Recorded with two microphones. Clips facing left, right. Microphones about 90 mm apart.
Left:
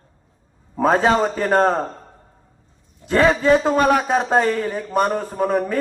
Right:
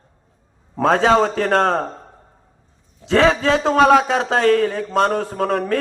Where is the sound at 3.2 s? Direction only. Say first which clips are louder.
Left 1 dB; 90° right.